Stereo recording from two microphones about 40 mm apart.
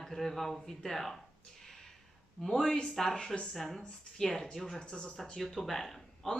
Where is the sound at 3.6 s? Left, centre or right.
Centre.